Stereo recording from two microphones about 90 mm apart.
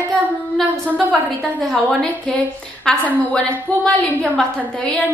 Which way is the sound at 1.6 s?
5° left (ahead or behind).